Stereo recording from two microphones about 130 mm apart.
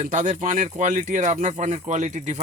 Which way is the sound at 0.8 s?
70° right (ahead or behind).